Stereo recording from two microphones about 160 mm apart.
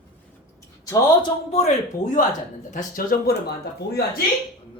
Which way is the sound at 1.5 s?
40° left (ahead or behind).